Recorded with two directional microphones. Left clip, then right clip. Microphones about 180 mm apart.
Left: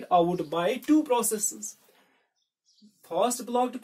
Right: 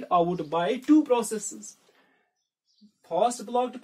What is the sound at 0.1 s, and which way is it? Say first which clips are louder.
Speech: even; 20° right (ahead or behind).